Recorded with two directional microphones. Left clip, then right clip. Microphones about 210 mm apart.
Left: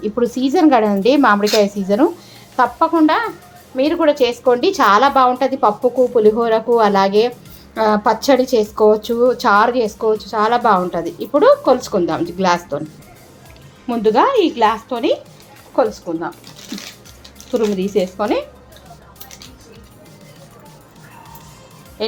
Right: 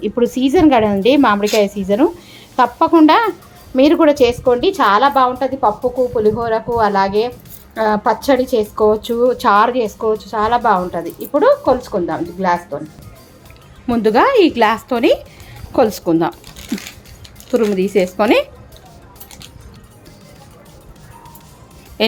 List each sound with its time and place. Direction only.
0.0 s a woman's voice: 10° right (ahead or behind)
2.6 s a woman's voice: 25° right (ahead or behind)
4.4 s a woman's voice: centre (ahead or behind)
13.8 s a woman's voice: 20° right (ahead or behind)
15.7 s a woman's voice: 45° right (ahead or behind)
17.7 s a woman's voice: 20° right (ahead or behind)
18.2 s speech: 35° right (ahead or behind)